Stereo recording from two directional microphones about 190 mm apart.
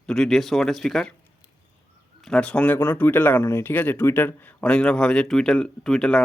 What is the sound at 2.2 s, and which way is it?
Speech, 5° left (ahead or behind).